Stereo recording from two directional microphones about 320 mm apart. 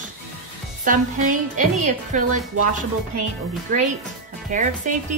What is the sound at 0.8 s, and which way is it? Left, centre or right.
A woman's voice, right.